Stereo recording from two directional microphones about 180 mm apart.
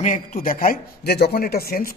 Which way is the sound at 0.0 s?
45° left (ahead or behind).